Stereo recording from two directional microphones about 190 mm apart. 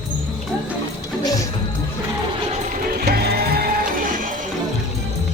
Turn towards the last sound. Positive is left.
turn(degrees=-50)  # may be behind; listen again after turning